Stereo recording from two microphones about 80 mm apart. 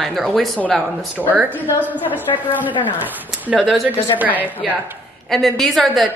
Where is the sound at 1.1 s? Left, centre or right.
Right.